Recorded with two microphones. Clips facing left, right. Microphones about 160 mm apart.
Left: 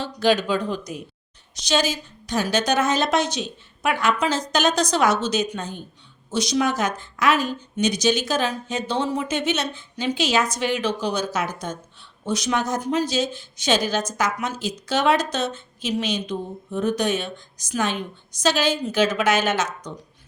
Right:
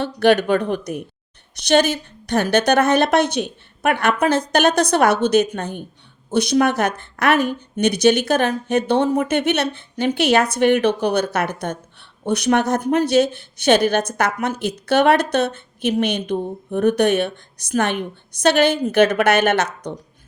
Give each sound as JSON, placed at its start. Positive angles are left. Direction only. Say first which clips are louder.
{"t": 0.0, "sound": "a woman's voice", "louder": "right 5 dB", "side_deg": -60}